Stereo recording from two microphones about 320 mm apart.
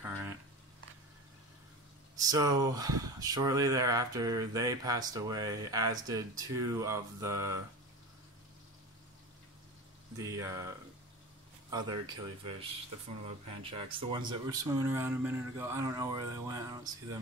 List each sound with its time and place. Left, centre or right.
0.0 s a sound: centre
2.1 s speech: centre
10.1 s speech: centre
11.7 s speech: centre